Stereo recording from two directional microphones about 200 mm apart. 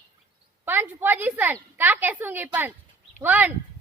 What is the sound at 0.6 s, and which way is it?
A woman's voice, 10° right (ahead or behind).